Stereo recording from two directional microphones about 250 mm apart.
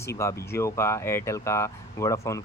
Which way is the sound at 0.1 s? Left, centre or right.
Centre.